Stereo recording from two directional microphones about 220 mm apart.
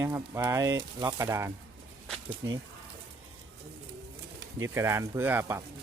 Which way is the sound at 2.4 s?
55° right (ahead or behind).